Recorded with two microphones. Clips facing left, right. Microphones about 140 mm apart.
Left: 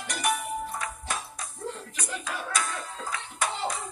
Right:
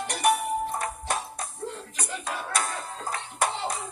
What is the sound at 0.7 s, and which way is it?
Music, 45° right (ahead or behind).